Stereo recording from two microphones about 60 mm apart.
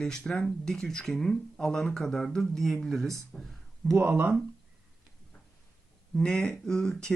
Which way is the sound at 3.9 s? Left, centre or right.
Right.